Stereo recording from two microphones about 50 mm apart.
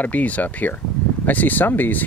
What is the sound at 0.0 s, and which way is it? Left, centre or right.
Speech, left.